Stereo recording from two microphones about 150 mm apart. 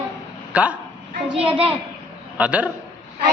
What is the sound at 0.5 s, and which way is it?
Speech, 10° right (ahead or behind).